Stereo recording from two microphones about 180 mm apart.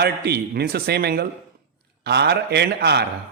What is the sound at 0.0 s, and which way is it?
A man's voice, 60° right (ahead or behind).